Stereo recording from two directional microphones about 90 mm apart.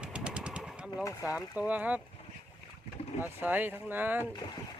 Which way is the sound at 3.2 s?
20° right (ahead or behind).